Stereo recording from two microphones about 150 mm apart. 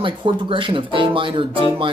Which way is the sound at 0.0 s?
35° right (ahead or behind).